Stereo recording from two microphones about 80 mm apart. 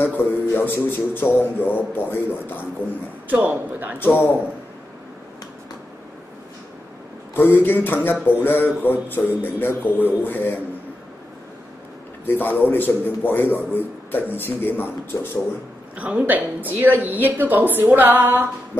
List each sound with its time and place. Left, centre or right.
0.0 s a man's voice: left
3.3 s a woman's voice: right
4.0 s speech: left
7.3 s speech: left
12.3 s speech: left
15.1 s speech: left
16.0 s a woman's voice: centre